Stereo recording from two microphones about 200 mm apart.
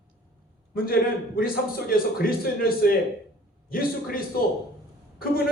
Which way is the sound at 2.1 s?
50° left (ahead or behind).